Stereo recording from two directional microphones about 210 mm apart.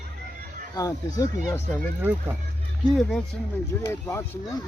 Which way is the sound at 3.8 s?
10° left (ahead or behind).